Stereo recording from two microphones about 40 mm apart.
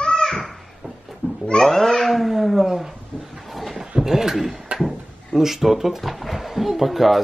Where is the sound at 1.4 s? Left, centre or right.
Centre.